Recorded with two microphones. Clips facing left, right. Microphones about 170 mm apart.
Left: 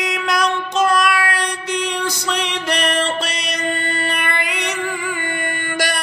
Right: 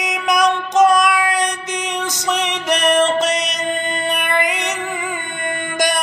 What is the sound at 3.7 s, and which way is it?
Music, 20° right (ahead or behind).